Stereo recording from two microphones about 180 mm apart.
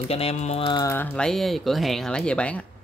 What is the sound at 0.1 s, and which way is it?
Speech, 35° left (ahead or behind).